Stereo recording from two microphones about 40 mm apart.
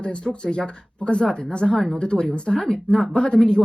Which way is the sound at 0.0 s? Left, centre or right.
Left.